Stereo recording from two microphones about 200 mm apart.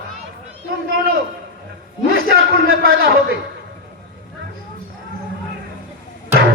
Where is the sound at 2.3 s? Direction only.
50° right (ahead or behind).